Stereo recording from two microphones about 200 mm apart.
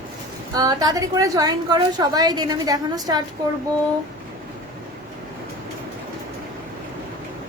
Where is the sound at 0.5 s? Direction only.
20° right (ahead or behind).